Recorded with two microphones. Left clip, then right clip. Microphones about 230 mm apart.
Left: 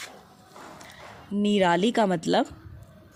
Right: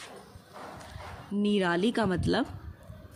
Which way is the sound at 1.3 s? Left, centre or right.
Left.